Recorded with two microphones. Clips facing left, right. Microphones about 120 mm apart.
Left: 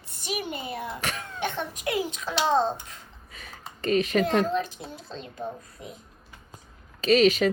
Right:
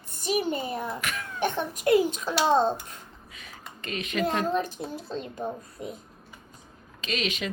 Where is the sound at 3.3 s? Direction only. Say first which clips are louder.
Left 3 dB; 35° left (ahead or behind).